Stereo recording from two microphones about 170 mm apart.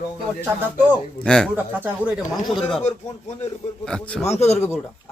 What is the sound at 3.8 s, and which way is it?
Speech, 5° left (ahead or behind).